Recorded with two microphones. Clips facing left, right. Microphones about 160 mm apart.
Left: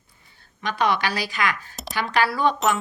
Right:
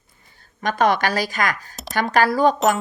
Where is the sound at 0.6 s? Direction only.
45° right (ahead or behind).